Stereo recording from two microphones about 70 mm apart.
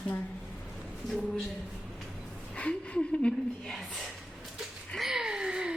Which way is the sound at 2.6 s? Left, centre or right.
Centre.